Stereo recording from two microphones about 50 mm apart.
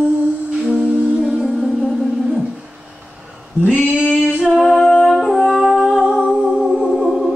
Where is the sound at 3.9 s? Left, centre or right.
Right.